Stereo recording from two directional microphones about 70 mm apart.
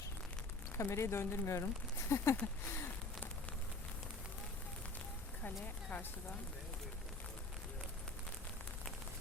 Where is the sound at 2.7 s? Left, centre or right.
Left.